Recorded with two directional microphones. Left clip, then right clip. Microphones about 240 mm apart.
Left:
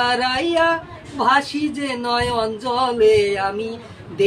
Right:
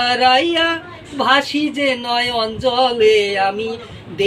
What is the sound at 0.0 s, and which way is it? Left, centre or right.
Speech, centre.